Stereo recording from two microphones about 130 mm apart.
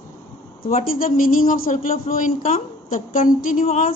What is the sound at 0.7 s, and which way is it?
Speech, 55° left (ahead or behind).